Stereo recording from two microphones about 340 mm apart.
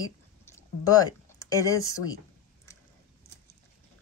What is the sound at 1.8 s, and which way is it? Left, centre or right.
Speech, left.